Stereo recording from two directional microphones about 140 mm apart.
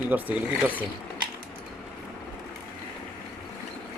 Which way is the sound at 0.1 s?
15° right (ahead or behind).